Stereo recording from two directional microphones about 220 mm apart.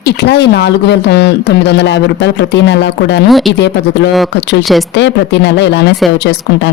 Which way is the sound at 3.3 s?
Centre (ahead or behind).